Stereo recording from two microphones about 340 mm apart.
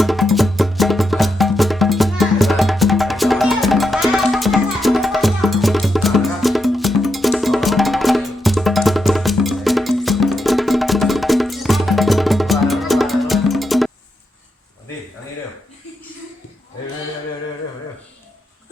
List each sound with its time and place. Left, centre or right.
0.0 s music: centre